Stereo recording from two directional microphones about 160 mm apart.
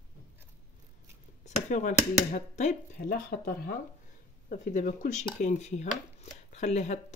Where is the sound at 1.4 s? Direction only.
50° left (ahead or behind).